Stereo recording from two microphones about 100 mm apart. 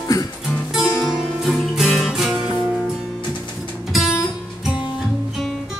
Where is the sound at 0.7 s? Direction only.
5° right (ahead or behind).